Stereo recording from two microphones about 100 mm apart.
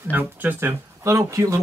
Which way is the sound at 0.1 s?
20° right (ahead or behind).